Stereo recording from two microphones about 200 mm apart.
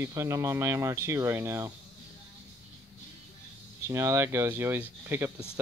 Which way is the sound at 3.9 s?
15° right (ahead or behind).